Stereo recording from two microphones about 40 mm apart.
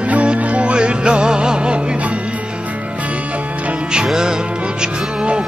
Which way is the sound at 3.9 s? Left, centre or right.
Centre.